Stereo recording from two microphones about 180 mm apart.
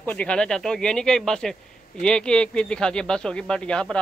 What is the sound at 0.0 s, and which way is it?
Speech, 10° left (ahead or behind).